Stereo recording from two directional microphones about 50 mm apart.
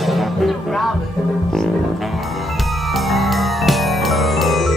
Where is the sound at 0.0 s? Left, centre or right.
Centre.